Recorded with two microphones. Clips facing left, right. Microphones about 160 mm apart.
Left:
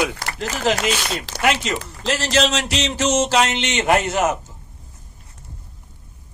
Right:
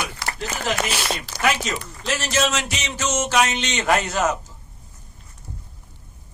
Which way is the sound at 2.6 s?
75° left (ahead or behind).